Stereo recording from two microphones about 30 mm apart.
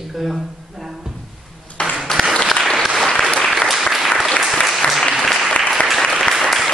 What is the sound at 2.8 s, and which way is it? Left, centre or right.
Applause, centre.